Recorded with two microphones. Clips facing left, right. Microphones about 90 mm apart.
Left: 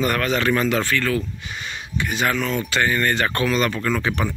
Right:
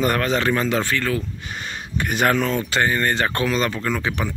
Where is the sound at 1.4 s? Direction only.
40° right (ahead or behind).